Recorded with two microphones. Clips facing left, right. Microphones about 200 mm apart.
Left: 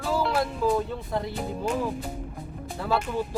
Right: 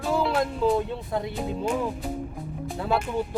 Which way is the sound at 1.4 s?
5° right (ahead or behind).